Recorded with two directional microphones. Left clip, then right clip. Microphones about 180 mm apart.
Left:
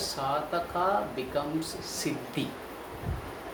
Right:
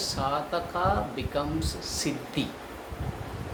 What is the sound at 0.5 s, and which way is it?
Speech, 15° right (ahead or behind).